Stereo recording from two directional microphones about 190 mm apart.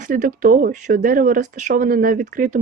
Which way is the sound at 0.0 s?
45° right (ahead or behind).